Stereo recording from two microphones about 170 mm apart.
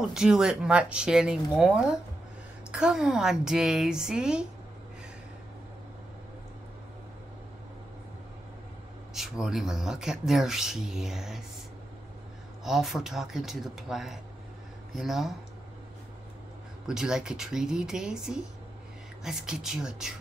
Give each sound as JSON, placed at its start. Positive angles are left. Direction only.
{"t": 0.1, "sound": "speech", "side_deg": -5}
{"t": 9.1, "sound": "speech", "side_deg": 0}
{"t": 12.6, "sound": "speech", "side_deg": 0}
{"t": 16.8, "sound": "speech", "side_deg": -5}